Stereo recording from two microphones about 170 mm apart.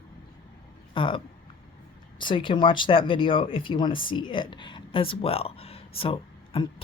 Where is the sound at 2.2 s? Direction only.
30° left (ahead or behind).